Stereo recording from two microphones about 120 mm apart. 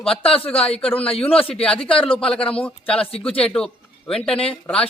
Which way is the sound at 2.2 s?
10° left (ahead or behind).